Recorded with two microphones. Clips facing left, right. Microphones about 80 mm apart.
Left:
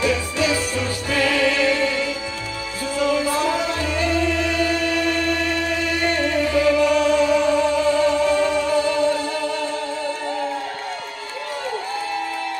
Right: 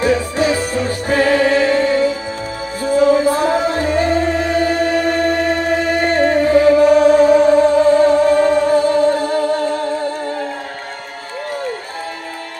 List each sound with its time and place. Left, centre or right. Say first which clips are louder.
0.0 s music: right 6 dB; right